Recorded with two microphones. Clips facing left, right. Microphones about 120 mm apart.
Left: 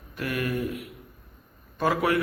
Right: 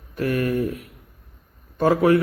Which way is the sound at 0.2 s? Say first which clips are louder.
Right 6 dB; 35° right (ahead or behind).